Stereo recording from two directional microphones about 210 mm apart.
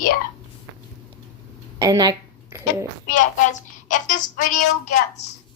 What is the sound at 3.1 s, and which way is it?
A woman's voice, 35° left (ahead or behind).